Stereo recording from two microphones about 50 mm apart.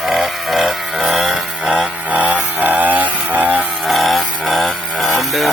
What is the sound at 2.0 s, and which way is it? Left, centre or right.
Chainsaw, right.